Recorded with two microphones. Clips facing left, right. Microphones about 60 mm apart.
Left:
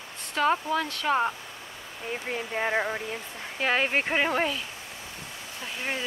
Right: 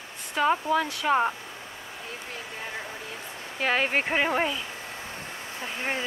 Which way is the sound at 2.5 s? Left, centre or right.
Left.